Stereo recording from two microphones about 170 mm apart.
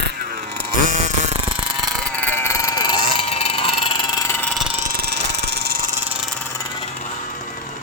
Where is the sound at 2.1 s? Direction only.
10° left (ahead or behind).